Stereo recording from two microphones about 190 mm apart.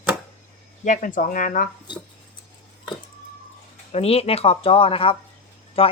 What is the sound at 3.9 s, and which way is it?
Speech, 30° left (ahead or behind).